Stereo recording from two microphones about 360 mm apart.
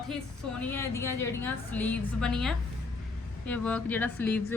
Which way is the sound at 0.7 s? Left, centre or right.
Centre.